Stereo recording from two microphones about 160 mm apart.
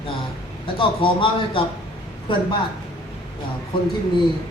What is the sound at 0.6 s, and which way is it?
Speech, 30° left (ahead or behind).